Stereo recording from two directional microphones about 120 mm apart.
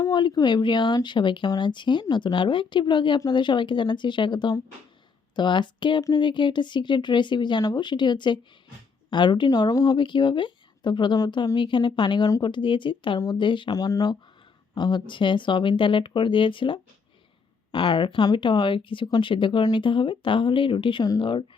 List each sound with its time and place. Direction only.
0.0 s speech: 40° left (ahead or behind)
13.7 s speech: 30° left (ahead or behind)